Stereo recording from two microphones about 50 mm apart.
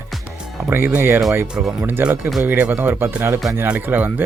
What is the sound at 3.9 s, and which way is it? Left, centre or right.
Speech, right.